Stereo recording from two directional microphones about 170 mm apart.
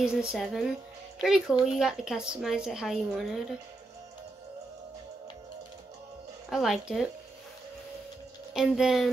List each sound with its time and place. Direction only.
0.0 s a woman's voice: 5° right (ahead or behind)
6.5 s a woman's voice: centre (ahead or behind)
8.5 s a woman's voice: 5° right (ahead or behind)